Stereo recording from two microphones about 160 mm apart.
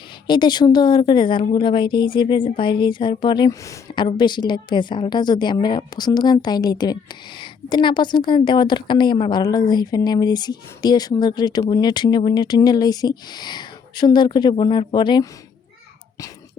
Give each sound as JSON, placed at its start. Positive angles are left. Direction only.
{"t": 0.3, "sound": "speech", "side_deg": 25}